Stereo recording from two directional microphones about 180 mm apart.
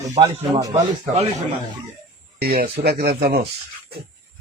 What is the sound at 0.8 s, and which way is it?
Speech, 35° right (ahead or behind).